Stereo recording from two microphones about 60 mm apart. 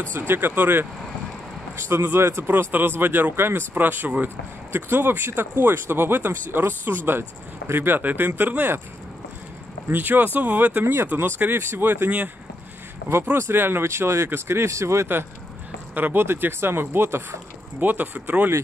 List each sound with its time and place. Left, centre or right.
0.3 s speech: right
1.8 s speech: right
9.8 s speech: right
11.1 s speech: right
13.1 s speech: right
15.9 s speech: right
17.7 s speech: right